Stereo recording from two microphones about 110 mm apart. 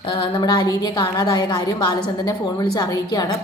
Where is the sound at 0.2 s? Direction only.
45° left (ahead or behind).